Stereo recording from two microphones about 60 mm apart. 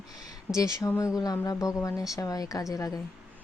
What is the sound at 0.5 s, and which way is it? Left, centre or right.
Speech, left.